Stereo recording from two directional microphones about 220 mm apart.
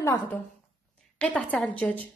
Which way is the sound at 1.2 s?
5° left (ahead or behind).